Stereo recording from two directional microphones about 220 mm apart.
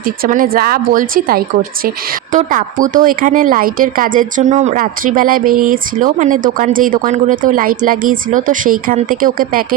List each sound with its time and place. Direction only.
0.0 s speech: 40° right (ahead or behind)